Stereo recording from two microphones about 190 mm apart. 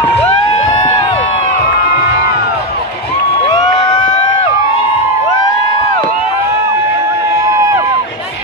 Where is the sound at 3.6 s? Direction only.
20° left (ahead or behind).